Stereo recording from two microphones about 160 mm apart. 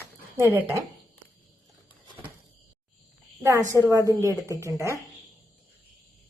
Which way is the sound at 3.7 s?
20° right (ahead or behind).